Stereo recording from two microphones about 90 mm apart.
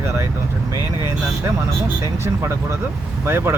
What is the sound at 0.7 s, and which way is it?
Speech, 35° right (ahead or behind).